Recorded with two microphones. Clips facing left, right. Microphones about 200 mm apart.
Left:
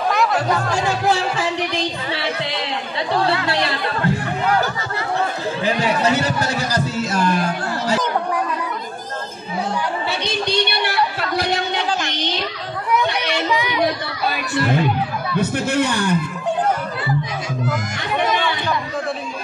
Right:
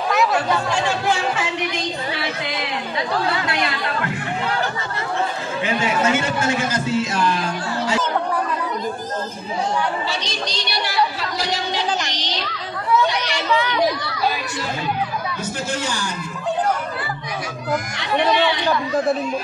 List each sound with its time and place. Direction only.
0.1 s chatter: centre (ahead or behind)
0.8 s music: 35° left (ahead or behind)
3.4 s chatter: 30° left (ahead or behind)
5.6 s a man's voice: 35° left (ahead or behind)
10.2 s a sound: 60° left (ahead or behind)
12.1 s music: 55° left (ahead or behind)
13.5 s children playing: 10° left (ahead or behind)
14.3 s a man's voice: 60° left (ahead or behind)